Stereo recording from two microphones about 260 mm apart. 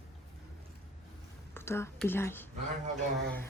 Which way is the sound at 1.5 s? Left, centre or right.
Centre.